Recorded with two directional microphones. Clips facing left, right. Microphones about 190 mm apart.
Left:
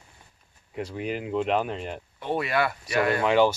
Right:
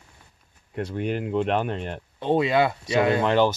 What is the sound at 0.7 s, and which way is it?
Speech, 5° left (ahead or behind).